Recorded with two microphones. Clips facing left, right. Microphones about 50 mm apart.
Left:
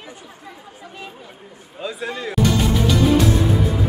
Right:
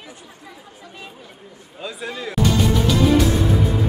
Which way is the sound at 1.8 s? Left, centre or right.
Centre.